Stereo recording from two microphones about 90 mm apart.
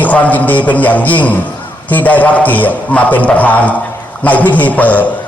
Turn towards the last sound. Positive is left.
turn(degrees=15)  # may be behind; listen again after turning